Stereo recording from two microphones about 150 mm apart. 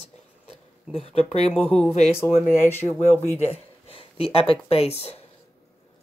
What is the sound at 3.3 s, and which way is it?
Speech, 40° left (ahead or behind).